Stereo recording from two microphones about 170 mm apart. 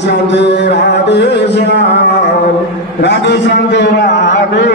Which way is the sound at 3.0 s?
90° left.